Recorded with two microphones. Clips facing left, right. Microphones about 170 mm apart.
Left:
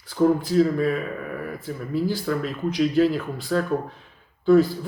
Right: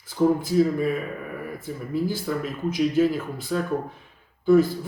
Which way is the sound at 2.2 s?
15° right (ahead or behind).